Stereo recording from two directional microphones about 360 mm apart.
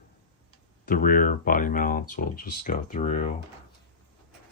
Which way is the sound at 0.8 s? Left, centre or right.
Left.